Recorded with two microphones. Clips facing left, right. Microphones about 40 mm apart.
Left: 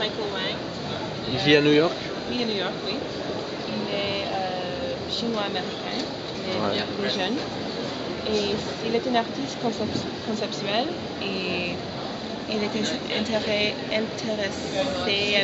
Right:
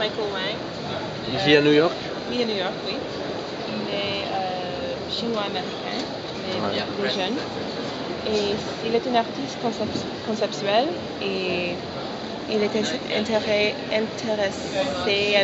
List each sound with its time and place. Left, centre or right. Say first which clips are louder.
1.3 s a woman's voice: right 2 dB; centre
6.5 s a woman's voice: even; centre
10.4 s a woman's voice: right 6 dB; centre